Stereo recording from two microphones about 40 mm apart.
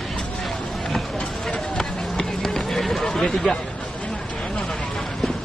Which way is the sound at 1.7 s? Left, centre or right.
Centre.